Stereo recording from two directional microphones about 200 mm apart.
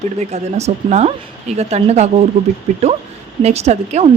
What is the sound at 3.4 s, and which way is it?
Speech, 35° right (ahead or behind).